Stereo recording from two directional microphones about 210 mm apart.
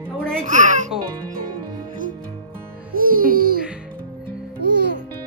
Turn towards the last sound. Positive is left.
turn(degrees=-55)  # may be behind; listen again after turning